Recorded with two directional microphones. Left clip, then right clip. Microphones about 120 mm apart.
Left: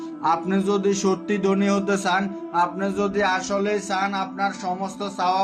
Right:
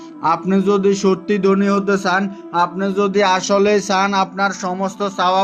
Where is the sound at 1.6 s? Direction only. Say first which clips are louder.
Right 5 dB; 30° right (ahead or behind).